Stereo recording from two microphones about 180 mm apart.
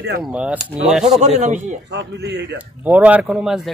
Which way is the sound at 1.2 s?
40° right (ahead or behind).